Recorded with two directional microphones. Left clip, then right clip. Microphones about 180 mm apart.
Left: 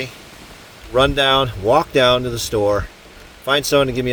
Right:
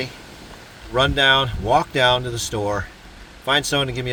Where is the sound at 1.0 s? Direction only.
40° left (ahead or behind).